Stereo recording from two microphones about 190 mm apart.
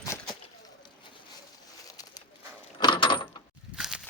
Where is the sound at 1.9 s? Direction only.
20° left (ahead or behind).